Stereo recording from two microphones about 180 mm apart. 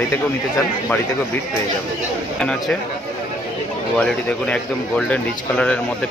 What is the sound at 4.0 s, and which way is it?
Speech, 5° left (ahead or behind).